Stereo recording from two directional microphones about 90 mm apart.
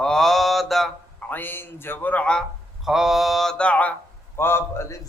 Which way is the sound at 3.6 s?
15° left (ahead or behind).